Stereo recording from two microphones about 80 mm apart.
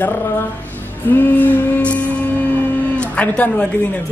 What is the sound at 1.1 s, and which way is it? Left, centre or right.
Music, left.